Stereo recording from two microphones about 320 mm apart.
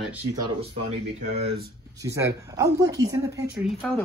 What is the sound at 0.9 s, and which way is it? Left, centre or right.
Speech, right.